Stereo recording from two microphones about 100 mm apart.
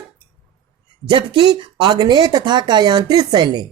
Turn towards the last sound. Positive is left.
turn(degrees=-45)  # may be behind; listen again after turning